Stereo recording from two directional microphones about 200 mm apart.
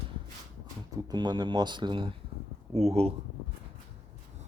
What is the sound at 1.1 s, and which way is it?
Speech, 20° right (ahead or behind).